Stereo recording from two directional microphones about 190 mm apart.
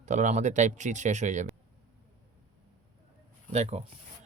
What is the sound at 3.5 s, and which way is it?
Speech, 35° right (ahead or behind).